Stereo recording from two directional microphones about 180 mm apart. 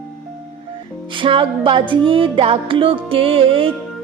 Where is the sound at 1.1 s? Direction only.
30° right (ahead or behind).